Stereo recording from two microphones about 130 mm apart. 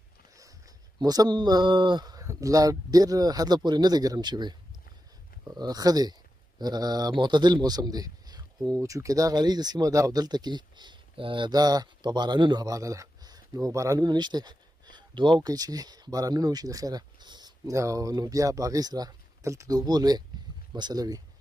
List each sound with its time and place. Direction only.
0.9 s speech: 30° right (ahead or behind)